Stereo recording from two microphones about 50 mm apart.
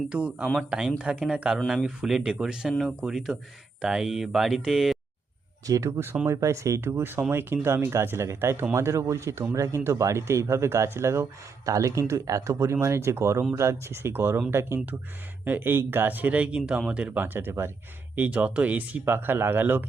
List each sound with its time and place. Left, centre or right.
0.1 s speech: right; by 4.9 s centre
6.2 s speech: right
6.9 s speech: right
11.8 s speech: right
12.8 s speech: right
15.4 s speech: right
17.2 s speech: right
18.2 s speech: right
19.0 s speech: right